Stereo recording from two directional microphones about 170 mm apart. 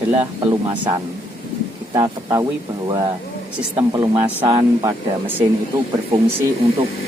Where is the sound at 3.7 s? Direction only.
25° right (ahead or behind).